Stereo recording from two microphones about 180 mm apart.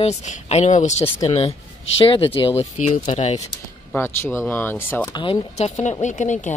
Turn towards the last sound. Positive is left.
turn(degrees=45)  # may be behind; listen again after turning